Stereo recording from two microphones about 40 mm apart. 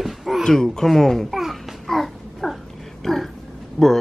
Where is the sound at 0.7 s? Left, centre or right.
Centre.